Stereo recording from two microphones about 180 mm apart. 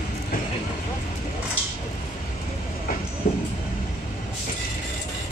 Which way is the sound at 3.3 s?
45° left (ahead or behind).